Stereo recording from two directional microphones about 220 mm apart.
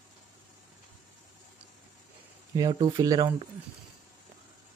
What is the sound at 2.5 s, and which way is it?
Speech, 20° right (ahead or behind).